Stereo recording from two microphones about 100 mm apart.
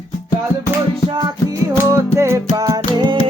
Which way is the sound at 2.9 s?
45° right (ahead or behind).